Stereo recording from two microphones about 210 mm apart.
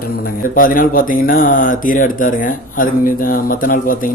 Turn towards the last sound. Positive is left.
turn(degrees=40)  # may be behind; listen again after turning